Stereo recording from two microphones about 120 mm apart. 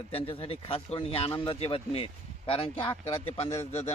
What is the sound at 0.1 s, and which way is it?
Speech, 50° left (ahead or behind).